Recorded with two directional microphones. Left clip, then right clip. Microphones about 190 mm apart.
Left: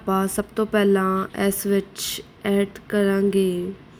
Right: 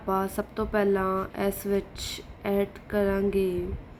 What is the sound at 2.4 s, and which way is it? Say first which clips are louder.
Mantra: left 4 dB; 15° left (ahead or behind).